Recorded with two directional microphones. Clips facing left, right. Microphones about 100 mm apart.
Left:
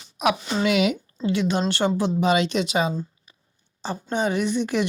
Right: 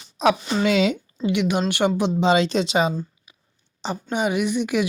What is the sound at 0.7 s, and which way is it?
Speech, 30° right (ahead or behind).